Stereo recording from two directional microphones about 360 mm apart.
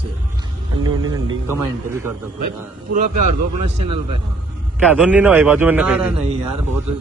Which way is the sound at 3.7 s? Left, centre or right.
Centre.